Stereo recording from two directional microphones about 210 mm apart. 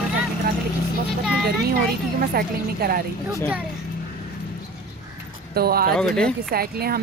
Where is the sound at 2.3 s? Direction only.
45° right (ahead or behind).